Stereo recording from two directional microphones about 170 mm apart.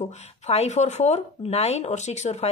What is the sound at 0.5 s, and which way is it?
Speech, 40° left (ahead or behind).